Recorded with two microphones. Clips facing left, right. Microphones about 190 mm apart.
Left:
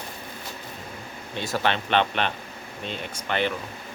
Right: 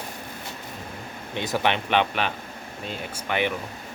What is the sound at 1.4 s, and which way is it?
Speech, 15° right (ahead or behind).